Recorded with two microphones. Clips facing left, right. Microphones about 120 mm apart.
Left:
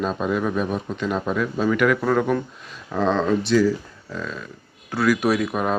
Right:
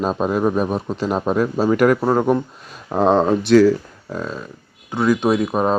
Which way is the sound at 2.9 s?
45° right (ahead or behind).